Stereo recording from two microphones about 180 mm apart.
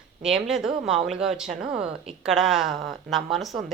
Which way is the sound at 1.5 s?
40° right (ahead or behind).